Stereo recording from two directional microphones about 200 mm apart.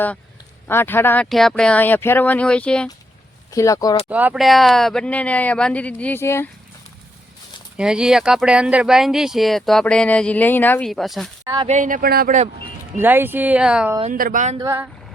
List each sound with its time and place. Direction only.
0.7 s speech: 10° left (ahead or behind)
3.5 s speech: 15° left (ahead or behind)
4.1 s speech: 5° right (ahead or behind); by 6.5 s 10° left (ahead or behind)
7.8 s speech: 5° right (ahead or behind)
11.4 s speech: 20° right (ahead or behind)
11.7 s speech: 40° right (ahead or behind)
13.0 s speech: 10° right (ahead or behind)
14.1 s speech: 45° right (ahead or behind)
14.6 s speech: 15° right (ahead or behind)